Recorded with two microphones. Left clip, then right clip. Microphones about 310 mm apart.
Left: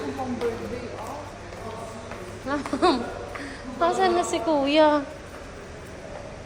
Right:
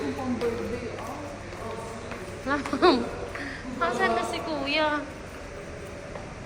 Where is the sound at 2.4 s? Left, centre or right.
Centre.